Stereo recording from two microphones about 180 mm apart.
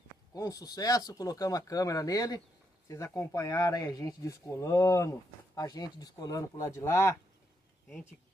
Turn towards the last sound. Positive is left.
turn(degrees=15)  # may be behind; listen again after turning